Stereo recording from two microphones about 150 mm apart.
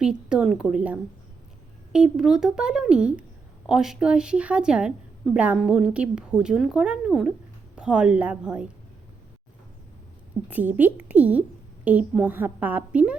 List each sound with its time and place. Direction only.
0.0 s a woman's voice: 5° right (ahead or behind)
10.5 s a woman's voice: 10° right (ahead or behind)